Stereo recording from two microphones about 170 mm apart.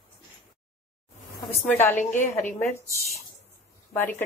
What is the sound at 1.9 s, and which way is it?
Speech, 45° left (ahead or behind).